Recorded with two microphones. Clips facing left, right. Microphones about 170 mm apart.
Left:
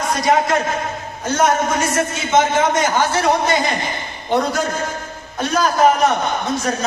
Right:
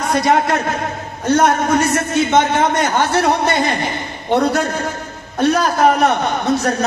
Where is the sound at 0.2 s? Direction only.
60° right (ahead or behind).